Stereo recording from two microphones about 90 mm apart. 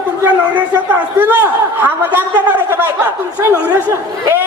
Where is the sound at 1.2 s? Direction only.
25° right (ahead or behind).